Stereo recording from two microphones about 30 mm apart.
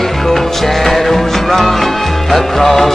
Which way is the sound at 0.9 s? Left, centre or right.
Centre.